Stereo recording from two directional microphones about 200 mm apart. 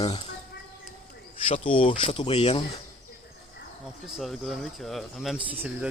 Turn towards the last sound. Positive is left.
turn(degrees=-5)  # may be behind; listen again after turning